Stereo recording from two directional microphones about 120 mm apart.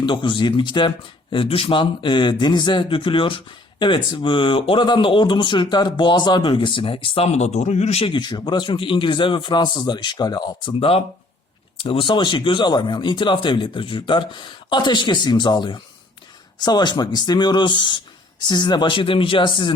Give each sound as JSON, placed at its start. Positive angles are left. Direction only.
{"t": 0.0, "sound": "speech", "side_deg": 40}
{"t": 8.1, "sound": "speech", "side_deg": 40}
{"t": 10.8, "sound": "speech", "side_deg": 50}